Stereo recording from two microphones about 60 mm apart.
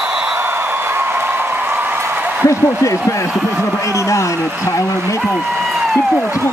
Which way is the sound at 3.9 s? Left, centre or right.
Left.